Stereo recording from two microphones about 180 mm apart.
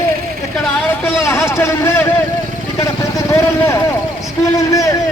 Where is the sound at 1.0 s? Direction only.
15° left (ahead or behind).